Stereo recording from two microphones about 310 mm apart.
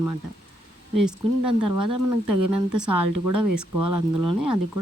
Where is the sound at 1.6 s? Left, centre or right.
Right.